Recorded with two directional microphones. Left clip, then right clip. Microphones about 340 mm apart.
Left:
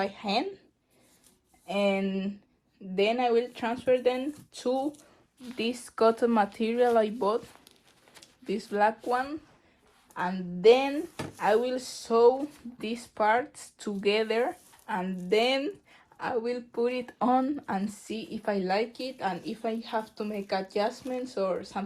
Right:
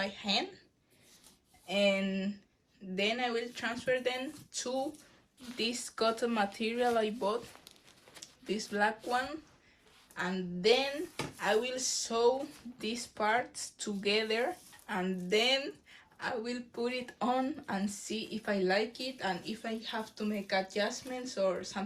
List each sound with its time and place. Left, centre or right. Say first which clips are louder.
0.0 s speech: left 4 dB; centre
1.6 s speech: left 2 dB; centre
8.4 s speech: left 6 dB; centre
10.2 s speech: left 5 dB; centre